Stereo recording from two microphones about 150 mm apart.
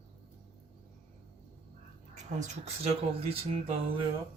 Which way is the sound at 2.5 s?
40° right (ahead or behind).